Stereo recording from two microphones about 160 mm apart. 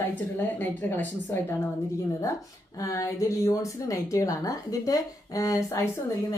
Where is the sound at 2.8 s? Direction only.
20° left (ahead or behind).